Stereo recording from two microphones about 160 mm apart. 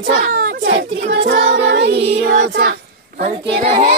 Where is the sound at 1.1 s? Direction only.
90° right.